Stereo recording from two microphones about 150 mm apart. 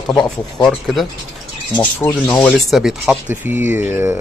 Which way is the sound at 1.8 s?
10° left (ahead or behind).